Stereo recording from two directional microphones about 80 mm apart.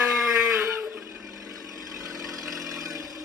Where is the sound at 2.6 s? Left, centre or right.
Right.